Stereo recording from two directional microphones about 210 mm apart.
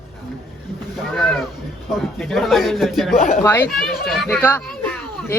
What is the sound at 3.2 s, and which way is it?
Speech, 35° left (ahead or behind).